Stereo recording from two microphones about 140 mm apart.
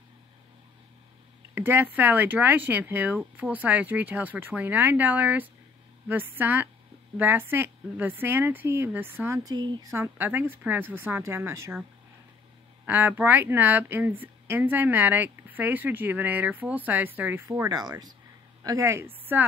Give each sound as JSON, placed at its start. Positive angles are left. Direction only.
{"t": 1.5, "sound": "speech", "side_deg": -15}
{"t": 9.4, "sound": "speech", "side_deg": -30}
{"t": 9.9, "sound": "speech", "side_deg": -15}
{"t": 12.8, "sound": "speech", "side_deg": -15}
{"t": 17.5, "sound": "a woman's voice", "side_deg": -25}